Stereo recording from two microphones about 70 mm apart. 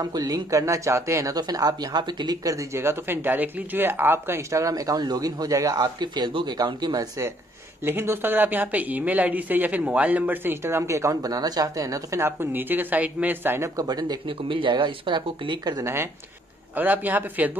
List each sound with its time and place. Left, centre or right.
0.0 s speech: right
1.3 s speech: right
2.5 s speech: right
5.8 s speech: right
7.8 s speech: right
12.2 s speech: right
13.7 s speech: right
14.7 s speech: right
15.8 s speech: right
16.7 s speech: right